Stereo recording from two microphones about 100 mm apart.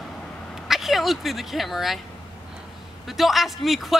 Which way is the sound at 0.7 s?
Centre (ahead or behind).